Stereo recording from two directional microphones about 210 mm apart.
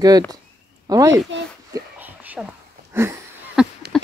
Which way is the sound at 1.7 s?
10° right (ahead or behind).